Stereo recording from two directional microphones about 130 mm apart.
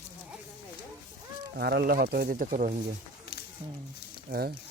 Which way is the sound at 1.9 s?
90° right.